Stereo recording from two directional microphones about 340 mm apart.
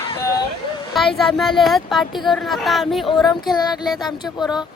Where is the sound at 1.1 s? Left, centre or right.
Centre.